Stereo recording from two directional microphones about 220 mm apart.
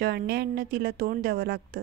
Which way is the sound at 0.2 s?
45° right (ahead or behind).